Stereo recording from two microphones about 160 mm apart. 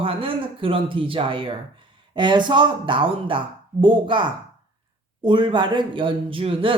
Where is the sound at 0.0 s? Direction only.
35° right (ahead or behind).